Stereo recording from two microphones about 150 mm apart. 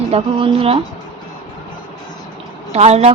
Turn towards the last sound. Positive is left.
turn(degrees=-45)  # may be behind; listen again after turning